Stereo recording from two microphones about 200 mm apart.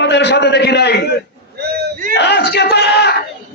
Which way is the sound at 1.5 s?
55° right (ahead or behind).